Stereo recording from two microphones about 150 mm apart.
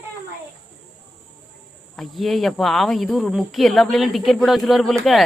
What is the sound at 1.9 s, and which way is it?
Speech, centre (ahead or behind).